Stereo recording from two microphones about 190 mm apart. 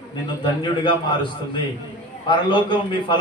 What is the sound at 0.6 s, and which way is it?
Speech, 25° left (ahead or behind).